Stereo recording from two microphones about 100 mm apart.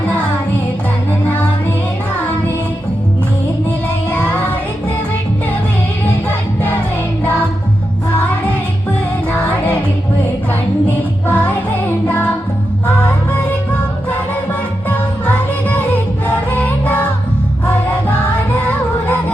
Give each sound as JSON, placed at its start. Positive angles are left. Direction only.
{"t": 4.1, "sound": "music", "side_deg": 10}
{"t": 6.2, "sound": "music", "side_deg": 15}
{"t": 9.3, "sound": "music", "side_deg": 15}
{"t": 10.8, "sound": "music", "side_deg": 15}
{"t": 14.8, "sound": "music", "side_deg": 15}